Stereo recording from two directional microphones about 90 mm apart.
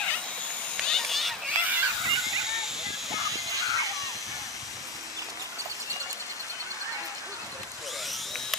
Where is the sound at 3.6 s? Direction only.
35° left (ahead or behind).